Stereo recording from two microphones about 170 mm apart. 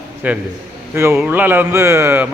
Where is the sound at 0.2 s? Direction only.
10° right (ahead or behind).